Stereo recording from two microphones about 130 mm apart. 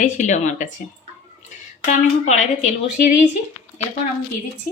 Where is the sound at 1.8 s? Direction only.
65° left (ahead or behind).